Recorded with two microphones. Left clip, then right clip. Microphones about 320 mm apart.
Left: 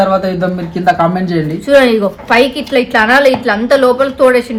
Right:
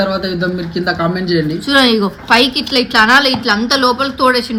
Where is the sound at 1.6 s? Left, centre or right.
Centre.